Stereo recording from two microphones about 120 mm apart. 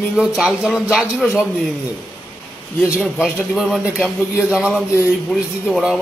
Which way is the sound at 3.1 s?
15° left (ahead or behind).